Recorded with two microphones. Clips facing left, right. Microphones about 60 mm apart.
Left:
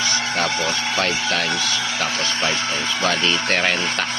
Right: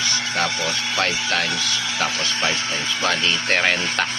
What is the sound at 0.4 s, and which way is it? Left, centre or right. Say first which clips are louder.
Speech: left 2 dB; left.